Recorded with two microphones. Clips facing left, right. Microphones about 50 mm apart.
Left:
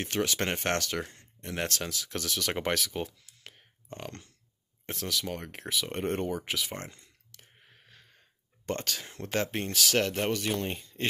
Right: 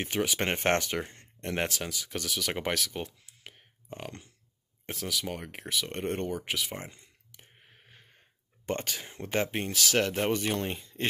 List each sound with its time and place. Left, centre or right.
0.0 s speech: centre
0.5 s speech: right
1.7 s speech: centre
3.1 s typing: centre
4.8 s speech: centre
6.9 s a sound: centre
8.6 s speech: centre
10.3 s speech: right
10.7 s speech: centre